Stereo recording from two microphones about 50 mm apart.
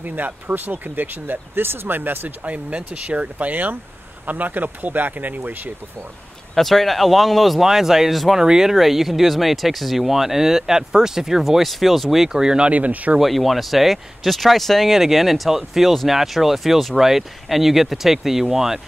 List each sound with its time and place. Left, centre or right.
0.0 s speech: right
6.5 s speech: centre
12.7 s speech: right
13.2 s speech: centre